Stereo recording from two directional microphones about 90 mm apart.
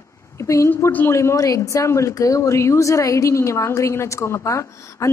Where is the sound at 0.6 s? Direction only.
25° left (ahead or behind).